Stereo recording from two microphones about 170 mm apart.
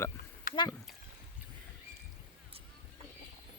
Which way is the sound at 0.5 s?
55° left (ahead or behind).